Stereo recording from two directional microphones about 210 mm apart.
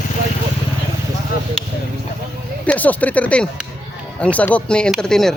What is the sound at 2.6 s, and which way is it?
Speech, 5° left (ahead or behind).